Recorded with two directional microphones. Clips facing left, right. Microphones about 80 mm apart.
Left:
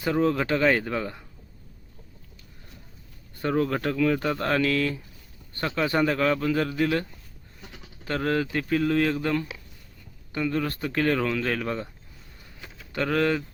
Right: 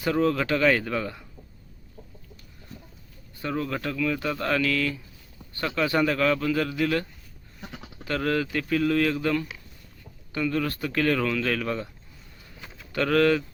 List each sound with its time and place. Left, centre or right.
0.0 s speech: left
3.4 s speech: left
8.0 s speech: left
12.5 s a sound: centre
12.9 s speech: centre